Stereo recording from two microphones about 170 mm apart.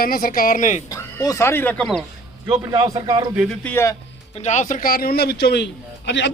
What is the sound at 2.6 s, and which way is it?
Speech, 20° right (ahead or behind).